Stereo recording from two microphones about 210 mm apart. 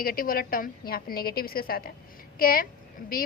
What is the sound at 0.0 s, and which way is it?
A woman's voice, 45° left (ahead or behind).